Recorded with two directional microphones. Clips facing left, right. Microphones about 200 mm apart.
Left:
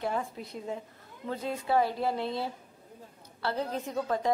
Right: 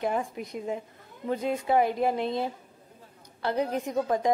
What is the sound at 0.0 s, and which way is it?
A woman's voice, 15° right (ahead or behind).